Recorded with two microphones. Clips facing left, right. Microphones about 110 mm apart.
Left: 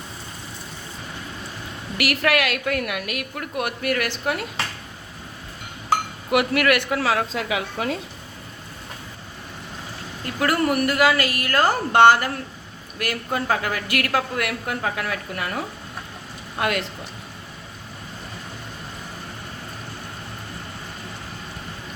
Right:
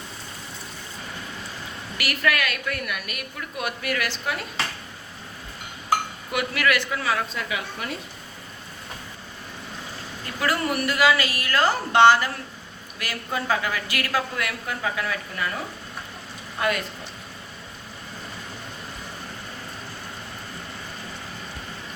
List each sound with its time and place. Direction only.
2.0 s a woman's voice: 75° left (ahead or behind); by 4.4 s 60° left (ahead or behind)
6.3 s a woman's voice: 60° left (ahead or behind); by 7.9 s 90° left
10.4 s a man's voice: 50° left (ahead or behind)
16.6 s a woman's voice: 75° left (ahead or behind)